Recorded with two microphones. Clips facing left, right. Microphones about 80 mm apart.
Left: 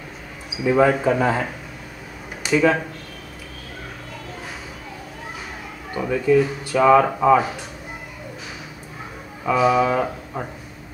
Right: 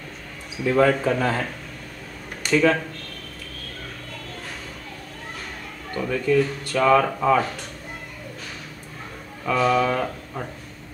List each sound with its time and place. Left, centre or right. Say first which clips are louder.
0.5 s speech: left 2 dB; centre
5.9 s speech: left 3 dB; centre
9.4 s speech: left 3 dB; centre